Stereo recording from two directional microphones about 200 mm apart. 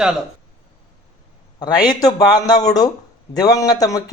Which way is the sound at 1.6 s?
20° left (ahead or behind).